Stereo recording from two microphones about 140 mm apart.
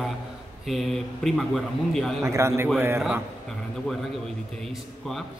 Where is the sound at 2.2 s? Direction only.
20° right (ahead or behind).